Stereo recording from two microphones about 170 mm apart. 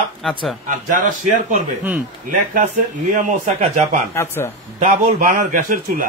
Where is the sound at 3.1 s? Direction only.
45° right (ahead or behind).